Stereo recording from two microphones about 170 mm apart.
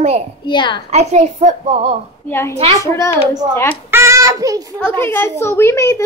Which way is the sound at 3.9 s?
15° right (ahead or behind).